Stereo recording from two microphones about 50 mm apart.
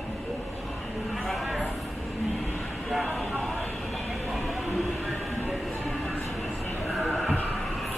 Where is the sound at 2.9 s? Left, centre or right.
Centre.